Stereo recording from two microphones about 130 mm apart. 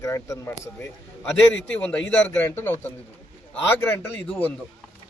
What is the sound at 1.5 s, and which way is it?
A man's voice, 10° left (ahead or behind).